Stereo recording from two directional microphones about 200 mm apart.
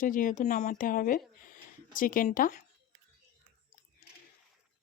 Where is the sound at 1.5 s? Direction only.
40° left (ahead or behind).